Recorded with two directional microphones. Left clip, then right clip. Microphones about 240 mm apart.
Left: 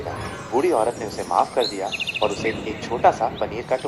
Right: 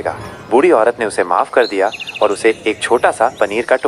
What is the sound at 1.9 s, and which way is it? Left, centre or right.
Speech, centre.